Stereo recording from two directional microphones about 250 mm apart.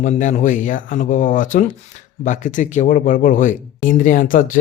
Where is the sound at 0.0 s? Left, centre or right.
Left.